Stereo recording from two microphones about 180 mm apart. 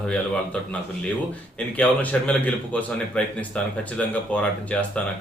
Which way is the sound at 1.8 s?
10° left (ahead or behind).